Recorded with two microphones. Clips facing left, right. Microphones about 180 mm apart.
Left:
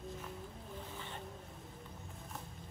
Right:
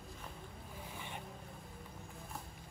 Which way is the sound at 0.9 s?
15° right (ahead or behind).